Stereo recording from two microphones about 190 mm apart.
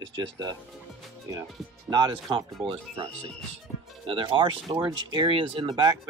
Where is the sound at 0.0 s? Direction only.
20° right (ahead or behind).